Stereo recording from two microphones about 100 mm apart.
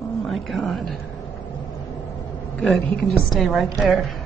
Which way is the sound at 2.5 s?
5° left (ahead or behind).